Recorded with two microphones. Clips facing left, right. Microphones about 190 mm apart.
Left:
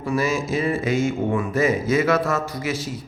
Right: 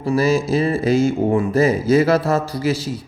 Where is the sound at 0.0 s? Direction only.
30° right (ahead or behind).